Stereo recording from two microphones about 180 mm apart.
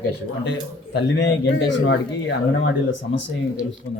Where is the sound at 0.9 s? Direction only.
85° left.